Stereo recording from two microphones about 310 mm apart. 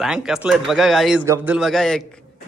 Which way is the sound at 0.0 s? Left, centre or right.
Centre.